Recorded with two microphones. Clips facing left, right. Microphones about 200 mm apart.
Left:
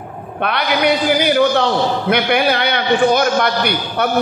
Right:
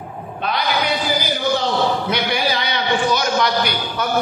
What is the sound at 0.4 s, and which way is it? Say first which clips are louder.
A man's voice: left 4 dB; 65° left (ahead or behind).